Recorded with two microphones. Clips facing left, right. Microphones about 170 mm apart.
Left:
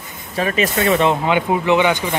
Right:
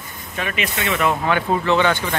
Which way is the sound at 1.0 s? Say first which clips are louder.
Left 3 dB; 20° left (ahead or behind).